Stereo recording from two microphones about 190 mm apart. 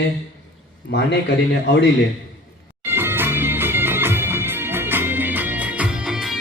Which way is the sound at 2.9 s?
10° right (ahead or behind).